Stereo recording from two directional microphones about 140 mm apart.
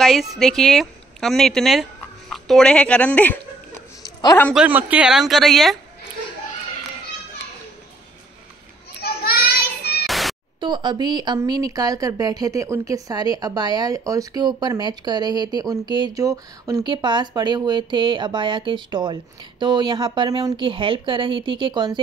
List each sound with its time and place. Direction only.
0.0 s speech: centre (ahead or behind)
4.0 s a sound: 25° left (ahead or behind)
4.6 s speech: 10° right (ahead or behind)
9.2 s child singing: 90° left
10.0 s music: centre (ahead or behind)
10.6 s a woman's voice: 35° right (ahead or behind)
16.8 s speech: 35° right (ahead or behind)